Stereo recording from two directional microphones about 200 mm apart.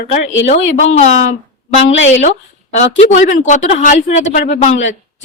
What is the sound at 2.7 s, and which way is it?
Speech, 35° left (ahead or behind).